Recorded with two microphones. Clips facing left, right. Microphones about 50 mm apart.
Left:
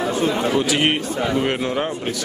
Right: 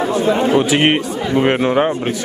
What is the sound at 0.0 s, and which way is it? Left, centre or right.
A man's voice, right.